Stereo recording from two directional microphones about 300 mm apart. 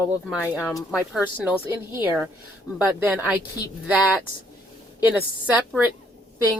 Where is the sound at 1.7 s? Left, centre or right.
Centre.